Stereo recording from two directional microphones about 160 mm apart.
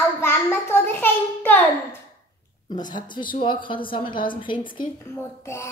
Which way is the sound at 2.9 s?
30° left (ahead or behind).